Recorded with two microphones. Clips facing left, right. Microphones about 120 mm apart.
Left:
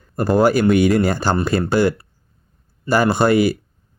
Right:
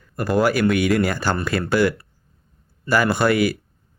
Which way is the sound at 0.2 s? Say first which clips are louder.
Left 4 dB; 30° left (ahead or behind).